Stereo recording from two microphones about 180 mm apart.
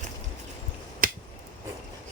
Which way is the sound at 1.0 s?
50° right (ahead or behind).